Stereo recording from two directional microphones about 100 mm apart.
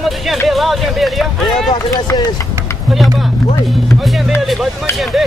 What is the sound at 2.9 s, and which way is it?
Speech, centre (ahead or behind).